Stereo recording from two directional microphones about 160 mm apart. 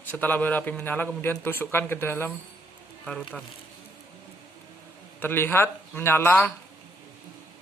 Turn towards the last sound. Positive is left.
turn(degrees=10)  # may be behind; listen again after turning